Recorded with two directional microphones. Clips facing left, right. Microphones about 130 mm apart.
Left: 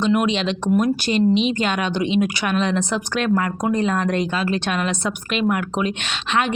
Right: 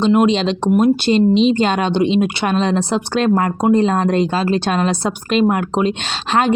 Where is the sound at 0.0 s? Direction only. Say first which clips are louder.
Right 5 dB; 30° right (ahead or behind).